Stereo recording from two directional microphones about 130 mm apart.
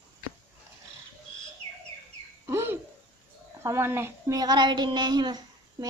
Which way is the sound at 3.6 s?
20° right (ahead or behind).